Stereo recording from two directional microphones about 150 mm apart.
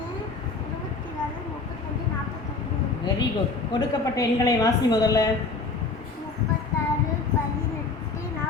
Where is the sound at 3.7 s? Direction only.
25° left (ahead or behind).